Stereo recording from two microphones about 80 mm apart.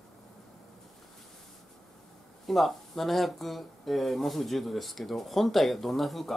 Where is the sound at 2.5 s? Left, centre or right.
Centre.